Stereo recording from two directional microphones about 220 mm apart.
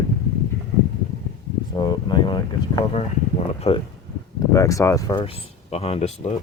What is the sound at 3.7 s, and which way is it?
Speech, 25° left (ahead or behind).